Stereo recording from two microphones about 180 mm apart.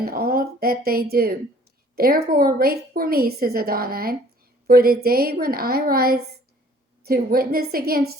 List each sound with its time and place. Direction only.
0.0 s a woman's voice: 55° right (ahead or behind)